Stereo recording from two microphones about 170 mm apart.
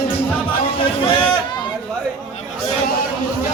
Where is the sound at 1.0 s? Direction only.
30° left (ahead or behind).